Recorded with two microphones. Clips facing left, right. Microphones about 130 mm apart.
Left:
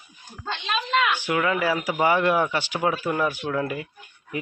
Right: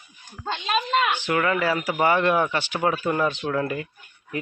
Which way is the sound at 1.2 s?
10° left (ahead or behind).